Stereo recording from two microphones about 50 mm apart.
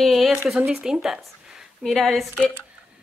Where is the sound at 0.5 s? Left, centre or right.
Centre.